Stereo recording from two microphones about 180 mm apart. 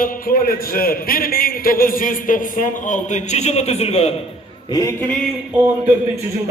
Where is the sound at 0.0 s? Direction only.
50° left (ahead or behind); by 4.1 s 35° left (ahead or behind).